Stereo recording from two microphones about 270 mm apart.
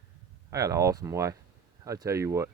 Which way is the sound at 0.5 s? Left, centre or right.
Centre.